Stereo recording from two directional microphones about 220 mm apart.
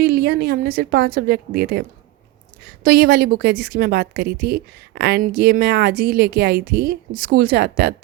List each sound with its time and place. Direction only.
0.0 s a woman's voice: 50° right (ahead or behind)
2.8 s a woman's voice: 45° right (ahead or behind)